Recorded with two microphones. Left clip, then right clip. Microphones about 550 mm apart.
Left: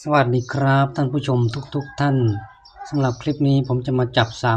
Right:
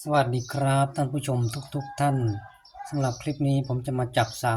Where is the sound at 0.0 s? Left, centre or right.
Right.